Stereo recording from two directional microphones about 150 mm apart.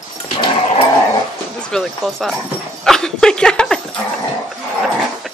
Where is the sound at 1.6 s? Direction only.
Centre (ahead or behind).